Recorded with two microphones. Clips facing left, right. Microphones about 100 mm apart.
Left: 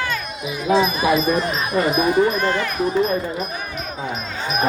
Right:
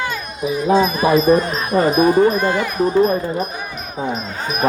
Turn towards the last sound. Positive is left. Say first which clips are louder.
# right 4 dB
turn(degrees=-35)  # may be behind; listen again after turning